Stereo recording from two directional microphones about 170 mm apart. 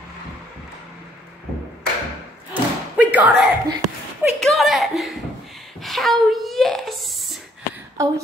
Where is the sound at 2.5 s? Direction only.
10° right (ahead or behind).